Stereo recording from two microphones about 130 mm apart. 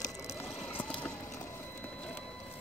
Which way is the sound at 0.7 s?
15° left (ahead or behind).